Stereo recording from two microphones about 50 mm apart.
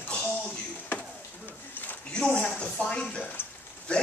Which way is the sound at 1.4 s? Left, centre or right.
Left.